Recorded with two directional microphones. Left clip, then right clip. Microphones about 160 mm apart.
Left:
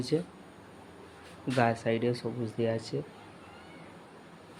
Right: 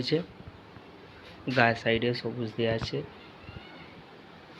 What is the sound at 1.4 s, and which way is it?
Speech, 10° left (ahead or behind).